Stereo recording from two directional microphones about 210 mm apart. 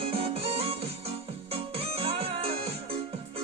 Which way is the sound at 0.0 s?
25° right (ahead or behind).